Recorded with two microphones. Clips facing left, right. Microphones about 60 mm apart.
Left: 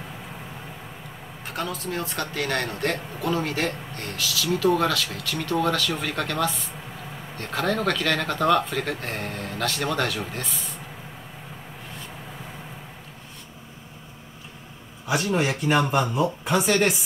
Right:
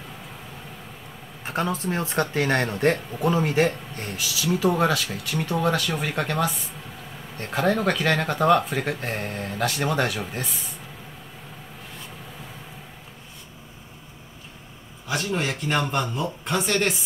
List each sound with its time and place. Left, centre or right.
1.4 s speech: right
15.0 s speech: centre